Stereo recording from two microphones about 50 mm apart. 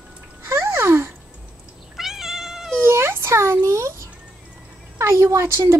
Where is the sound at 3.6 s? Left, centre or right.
Right.